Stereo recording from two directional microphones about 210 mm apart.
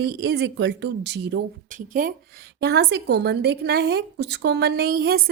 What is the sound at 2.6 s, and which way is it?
A woman's voice, 50° right (ahead or behind).